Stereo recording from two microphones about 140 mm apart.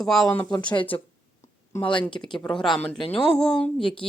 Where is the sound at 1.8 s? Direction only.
35° left (ahead or behind).